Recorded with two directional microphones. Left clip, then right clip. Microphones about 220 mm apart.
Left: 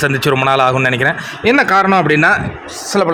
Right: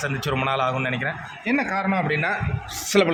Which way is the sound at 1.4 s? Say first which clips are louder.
Left 13 dB; 45° left (ahead or behind).